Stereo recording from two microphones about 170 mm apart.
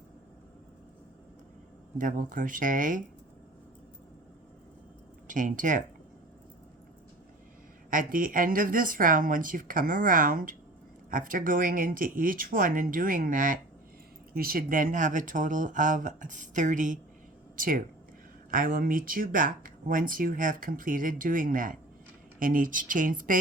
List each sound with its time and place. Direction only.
2.0 s speech: 50° right (ahead or behind)
5.3 s speech: 50° right (ahead or behind)
7.9 s speech: 55° right (ahead or behind)